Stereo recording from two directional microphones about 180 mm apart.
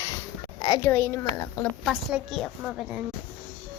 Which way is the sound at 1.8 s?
5° right (ahead or behind).